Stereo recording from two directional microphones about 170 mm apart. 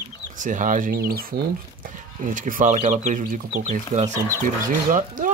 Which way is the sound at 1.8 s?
50° right (ahead or behind).